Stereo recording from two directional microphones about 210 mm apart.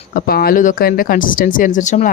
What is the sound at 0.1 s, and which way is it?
A woman's voice, 45° left (ahead or behind).